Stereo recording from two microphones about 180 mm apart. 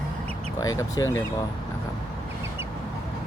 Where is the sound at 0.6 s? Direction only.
20° left (ahead or behind).